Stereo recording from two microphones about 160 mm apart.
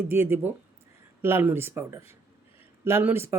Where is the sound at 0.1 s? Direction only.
15° right (ahead or behind).